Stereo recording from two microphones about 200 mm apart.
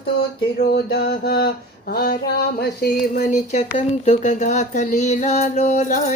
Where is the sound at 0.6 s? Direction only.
55° left (ahead or behind).